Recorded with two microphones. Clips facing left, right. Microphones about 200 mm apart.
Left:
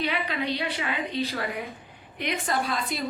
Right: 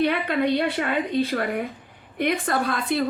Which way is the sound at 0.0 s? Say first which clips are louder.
Right 7 dB; 55° right (ahead or behind).